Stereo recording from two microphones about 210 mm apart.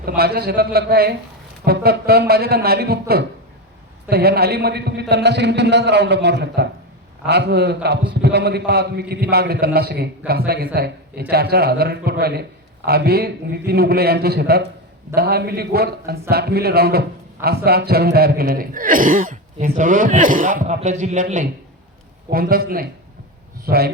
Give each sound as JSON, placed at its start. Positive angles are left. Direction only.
{"t": 0.2, "sound": "a man's voice", "side_deg": -50}